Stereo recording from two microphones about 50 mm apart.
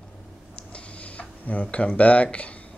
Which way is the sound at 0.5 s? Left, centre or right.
Left.